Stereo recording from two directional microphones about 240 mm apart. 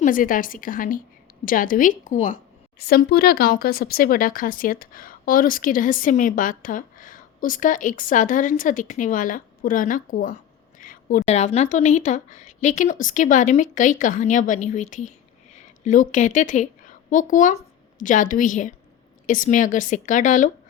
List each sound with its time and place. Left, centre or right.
0.0 s a woman's voice: left